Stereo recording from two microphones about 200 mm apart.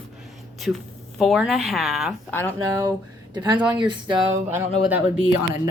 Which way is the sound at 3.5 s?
20° right (ahead or behind).